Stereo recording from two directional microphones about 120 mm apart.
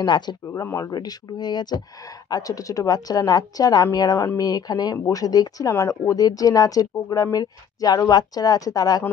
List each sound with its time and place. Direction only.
0.0 s speech: 40° left (ahead or behind)
0.5 s speech: 25° left (ahead or behind)